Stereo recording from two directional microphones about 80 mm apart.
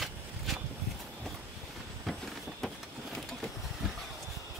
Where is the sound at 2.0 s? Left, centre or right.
Centre.